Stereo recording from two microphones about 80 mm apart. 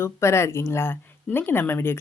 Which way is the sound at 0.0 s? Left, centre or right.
Left.